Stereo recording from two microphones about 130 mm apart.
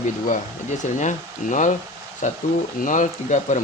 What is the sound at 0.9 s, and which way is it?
Speech, 70° left (ahead or behind).